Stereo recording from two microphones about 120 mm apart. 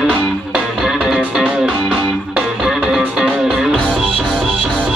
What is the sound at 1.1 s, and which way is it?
Music, 5° right (ahead or behind).